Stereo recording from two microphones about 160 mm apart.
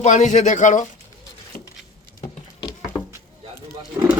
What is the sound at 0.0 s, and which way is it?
Speech, 50° left (ahead or behind).